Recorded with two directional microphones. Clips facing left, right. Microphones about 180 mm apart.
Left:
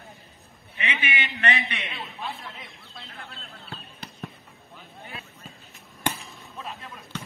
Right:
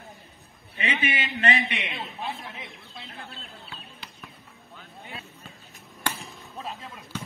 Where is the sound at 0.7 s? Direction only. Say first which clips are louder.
Right 2 dB; 35° right (ahead or behind).